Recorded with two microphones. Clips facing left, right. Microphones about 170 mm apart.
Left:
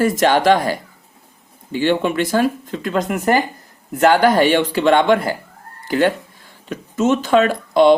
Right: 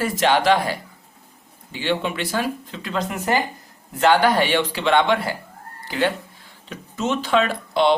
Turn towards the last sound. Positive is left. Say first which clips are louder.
# left 7 dB
turn(degrees=45)  # may be behind; listen again after turning